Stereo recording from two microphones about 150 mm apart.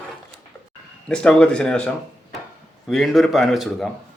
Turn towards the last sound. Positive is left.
turn(degrees=0)  # may be behind; listen again after turning